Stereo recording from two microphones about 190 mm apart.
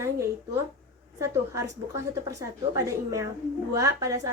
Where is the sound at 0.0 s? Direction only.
15° right (ahead or behind).